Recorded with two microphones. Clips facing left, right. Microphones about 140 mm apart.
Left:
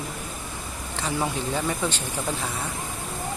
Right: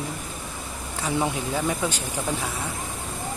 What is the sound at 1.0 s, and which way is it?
Speech, 5° right (ahead or behind).